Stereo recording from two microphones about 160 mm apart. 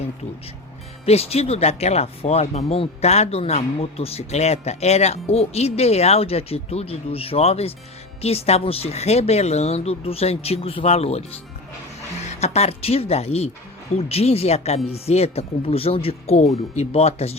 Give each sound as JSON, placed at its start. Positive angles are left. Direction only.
{"t": 1.0, "sound": "speech", "side_deg": 40}